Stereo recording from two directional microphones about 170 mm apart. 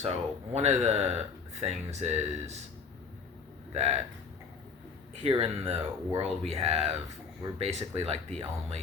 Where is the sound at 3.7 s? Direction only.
40° right (ahead or behind).